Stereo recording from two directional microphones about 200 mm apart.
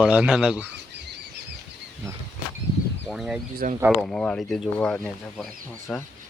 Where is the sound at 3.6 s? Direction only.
45° right (ahead or behind).